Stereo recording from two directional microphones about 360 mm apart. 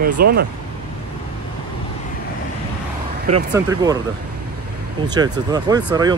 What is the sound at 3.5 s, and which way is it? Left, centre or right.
Speech, centre.